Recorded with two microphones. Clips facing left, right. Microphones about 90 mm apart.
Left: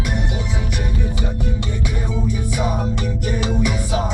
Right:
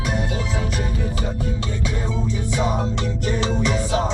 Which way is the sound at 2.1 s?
15° left (ahead or behind).